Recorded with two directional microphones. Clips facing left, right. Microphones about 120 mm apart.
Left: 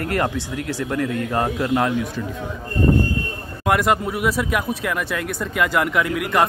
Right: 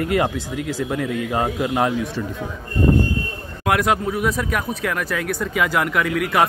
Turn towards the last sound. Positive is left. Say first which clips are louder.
# even
turn(degrees=0)  # may be behind; listen again after turning